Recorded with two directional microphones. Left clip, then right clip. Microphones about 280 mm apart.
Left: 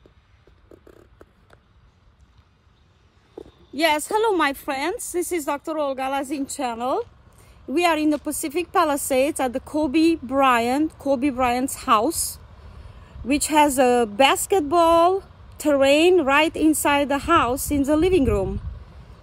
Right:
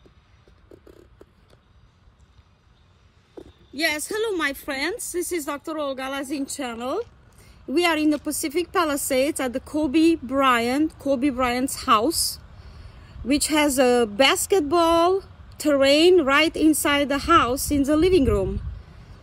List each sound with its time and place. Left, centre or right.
3.3 s a woman's voice: centre
13.3 s speech: centre